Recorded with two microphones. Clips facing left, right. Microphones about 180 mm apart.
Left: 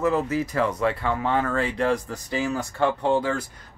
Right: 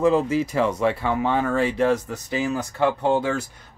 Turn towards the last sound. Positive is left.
turn(degrees=-20)  # may be behind; listen again after turning